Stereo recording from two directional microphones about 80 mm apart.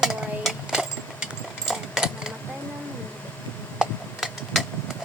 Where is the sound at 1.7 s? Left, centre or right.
Centre.